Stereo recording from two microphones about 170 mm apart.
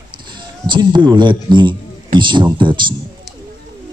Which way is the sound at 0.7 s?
25° right (ahead or behind).